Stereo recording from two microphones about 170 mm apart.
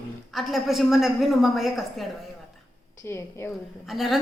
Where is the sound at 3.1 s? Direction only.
15° left (ahead or behind).